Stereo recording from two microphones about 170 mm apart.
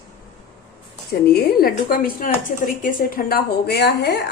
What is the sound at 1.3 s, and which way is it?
Speech, 60° left (ahead or behind).